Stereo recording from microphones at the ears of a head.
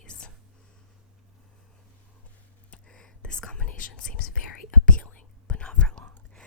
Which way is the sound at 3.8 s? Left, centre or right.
Left.